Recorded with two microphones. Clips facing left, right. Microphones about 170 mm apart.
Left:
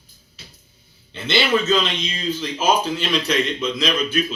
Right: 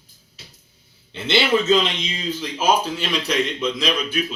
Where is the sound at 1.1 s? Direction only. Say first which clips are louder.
Right 1 dB; 20° right (ahead or behind).